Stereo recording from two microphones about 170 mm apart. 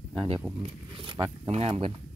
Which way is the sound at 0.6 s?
30° right (ahead or behind).